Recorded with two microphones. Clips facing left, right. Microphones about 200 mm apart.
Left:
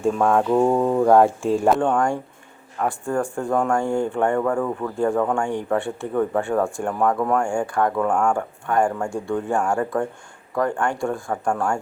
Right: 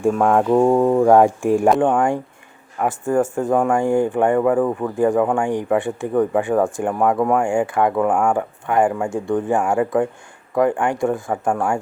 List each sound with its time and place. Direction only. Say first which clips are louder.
0.1 s speech: right 2 dB; 10° right (ahead or behind)
3.5 s speech: right 3 dB; 5° right (ahead or behind)
3.8 s speech: right 4 dB; 15° right (ahead or behind)
9.6 s speech: right 1 dB; 5° right (ahead or behind)
10.5 s speech: right 5 dB; 15° right (ahead or behind)
11.5 s speech: right 2 dB; 5° right (ahead or behind)